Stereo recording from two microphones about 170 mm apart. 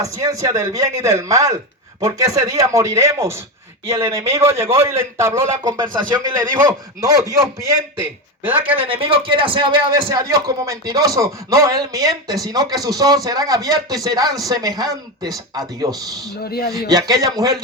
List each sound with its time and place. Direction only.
0.0 s a man's voice: 20° right (ahead or behind)
8.7 s a man's voice: 35° right (ahead or behind)
16.4 s speech: 65° left (ahead or behind)
16.9 s a man's voice: 20° right (ahead or behind)